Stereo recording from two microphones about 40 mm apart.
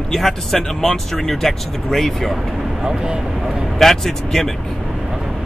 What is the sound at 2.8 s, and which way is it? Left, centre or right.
Speech, right.